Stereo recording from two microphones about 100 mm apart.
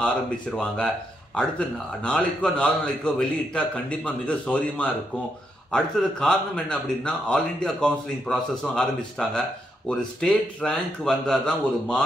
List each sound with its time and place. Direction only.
0.6 s speech: 10° left (ahead or behind)